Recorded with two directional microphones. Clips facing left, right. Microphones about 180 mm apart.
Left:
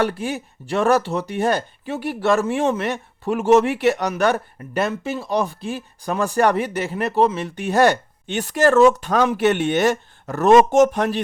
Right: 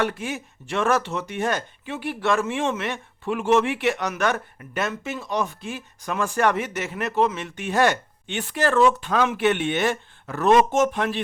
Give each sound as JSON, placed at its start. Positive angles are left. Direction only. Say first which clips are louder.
{"t": 0.0, "sound": "speech", "louder": "left 4 dB", "side_deg": 35}